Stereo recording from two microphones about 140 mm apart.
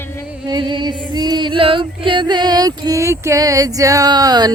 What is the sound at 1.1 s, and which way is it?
Female singing, 30° right (ahead or behind).